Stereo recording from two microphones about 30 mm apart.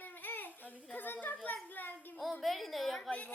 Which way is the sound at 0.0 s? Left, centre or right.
Left.